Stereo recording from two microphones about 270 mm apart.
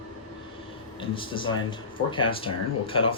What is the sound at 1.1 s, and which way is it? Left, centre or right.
Speech, centre.